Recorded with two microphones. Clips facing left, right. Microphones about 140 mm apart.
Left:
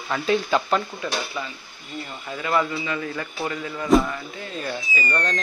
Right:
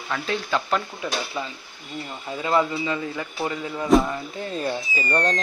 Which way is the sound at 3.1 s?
15° right (ahead or behind).